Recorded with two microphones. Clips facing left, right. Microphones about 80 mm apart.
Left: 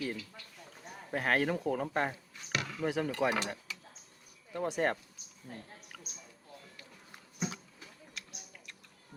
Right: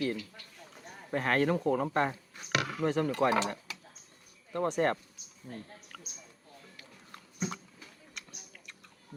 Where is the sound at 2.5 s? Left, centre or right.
Right.